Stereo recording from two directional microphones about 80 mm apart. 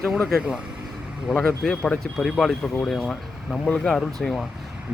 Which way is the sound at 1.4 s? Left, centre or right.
Centre.